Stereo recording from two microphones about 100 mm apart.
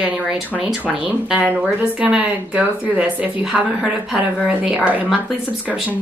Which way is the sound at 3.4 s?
5° right (ahead or behind).